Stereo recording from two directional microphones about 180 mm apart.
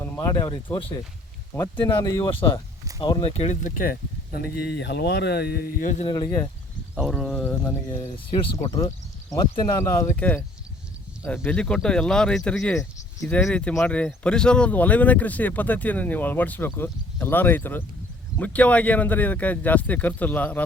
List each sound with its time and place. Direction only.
0.0 s speech: 20° left (ahead or behind); by 3.9 s 45° left (ahead or behind)
4.5 s speech: 65° left (ahead or behind)
6.1 s speech: 20° left (ahead or behind)
6.9 s speech: 5° right (ahead or behind)